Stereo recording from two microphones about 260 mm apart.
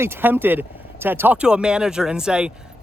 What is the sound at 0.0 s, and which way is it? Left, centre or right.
A woman's voice, centre.